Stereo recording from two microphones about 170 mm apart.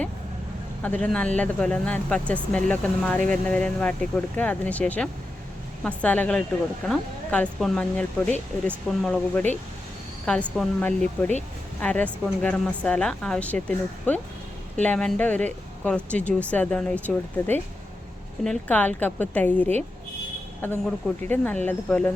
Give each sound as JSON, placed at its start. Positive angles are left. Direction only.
{"t": 0.8, "sound": "speech", "side_deg": 10}
{"t": 21.2, "sound": "speech", "side_deg": 10}